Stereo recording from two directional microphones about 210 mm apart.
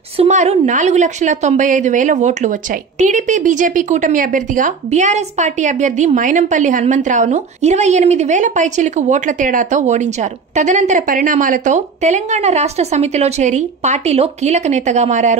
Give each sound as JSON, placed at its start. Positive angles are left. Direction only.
{"t": 0.2, "sound": "a woman's voice", "side_deg": -30}